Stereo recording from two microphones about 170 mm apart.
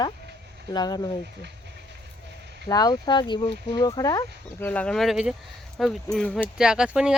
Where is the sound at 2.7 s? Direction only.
20° left (ahead or behind).